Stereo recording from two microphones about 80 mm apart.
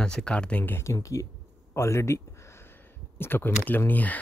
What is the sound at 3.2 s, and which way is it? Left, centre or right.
Speech, left.